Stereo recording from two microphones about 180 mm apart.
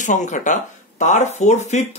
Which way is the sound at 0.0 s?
45° left (ahead or behind).